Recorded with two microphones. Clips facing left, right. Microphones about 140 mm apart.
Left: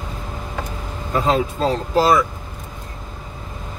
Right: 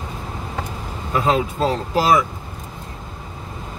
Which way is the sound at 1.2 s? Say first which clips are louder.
Even; 10° right (ahead or behind).